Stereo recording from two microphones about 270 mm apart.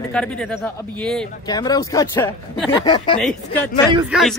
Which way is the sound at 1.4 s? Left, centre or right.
Centre.